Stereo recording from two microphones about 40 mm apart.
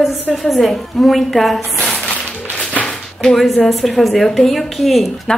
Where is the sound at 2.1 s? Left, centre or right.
Left.